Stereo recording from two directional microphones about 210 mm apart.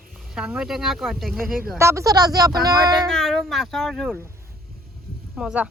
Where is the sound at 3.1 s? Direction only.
Centre (ahead or behind).